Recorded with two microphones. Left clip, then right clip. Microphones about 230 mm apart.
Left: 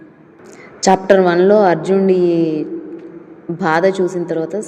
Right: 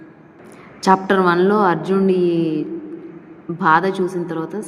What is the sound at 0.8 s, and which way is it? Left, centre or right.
A woman's voice, centre.